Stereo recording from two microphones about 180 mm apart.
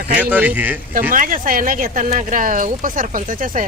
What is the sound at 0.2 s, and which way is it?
Speech, 10° right (ahead or behind).